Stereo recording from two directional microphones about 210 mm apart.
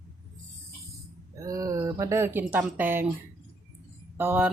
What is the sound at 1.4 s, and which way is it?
Speech, 15° right (ahead or behind).